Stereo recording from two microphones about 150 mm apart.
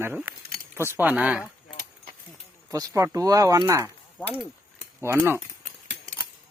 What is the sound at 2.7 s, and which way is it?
Speech, 20° right (ahead or behind).